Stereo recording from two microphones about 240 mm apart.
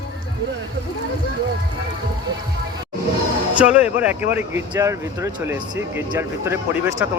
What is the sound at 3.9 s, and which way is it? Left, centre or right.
Speech, centre.